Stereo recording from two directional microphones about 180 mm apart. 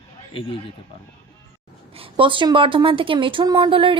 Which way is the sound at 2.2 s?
25° right (ahead or behind).